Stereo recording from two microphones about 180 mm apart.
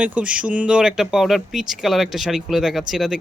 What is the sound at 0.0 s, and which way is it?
Speech, 5° right (ahead or behind).